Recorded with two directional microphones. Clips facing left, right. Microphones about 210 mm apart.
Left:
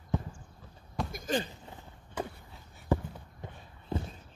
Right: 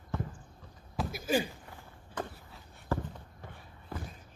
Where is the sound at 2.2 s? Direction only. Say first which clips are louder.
Left 2 dB; 10° left (ahead or behind).